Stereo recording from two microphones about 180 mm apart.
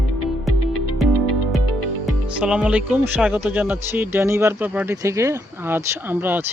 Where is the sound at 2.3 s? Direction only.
5° right (ahead or behind).